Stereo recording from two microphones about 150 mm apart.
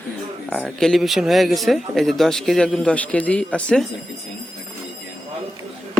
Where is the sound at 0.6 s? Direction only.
Centre (ahead or behind).